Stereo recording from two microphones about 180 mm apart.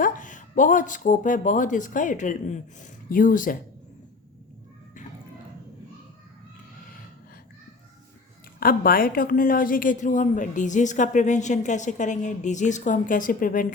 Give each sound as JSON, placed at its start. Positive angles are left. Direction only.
{"t": 0.0, "sound": "a woman's voice", "side_deg": 45}
{"t": 8.6, "sound": "a woman's voice", "side_deg": 55}